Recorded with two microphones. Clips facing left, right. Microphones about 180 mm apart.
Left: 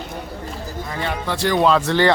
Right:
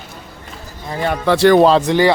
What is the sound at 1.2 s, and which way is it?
Speech, 85° right.